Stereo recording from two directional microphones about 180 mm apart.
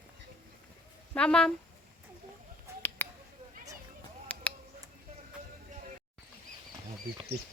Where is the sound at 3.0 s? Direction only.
10° left (ahead or behind).